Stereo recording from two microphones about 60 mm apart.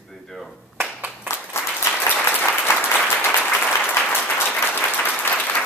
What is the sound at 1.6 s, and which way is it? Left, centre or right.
Applause, left.